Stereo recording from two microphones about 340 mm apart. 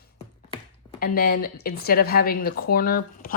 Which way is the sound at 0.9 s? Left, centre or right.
Left.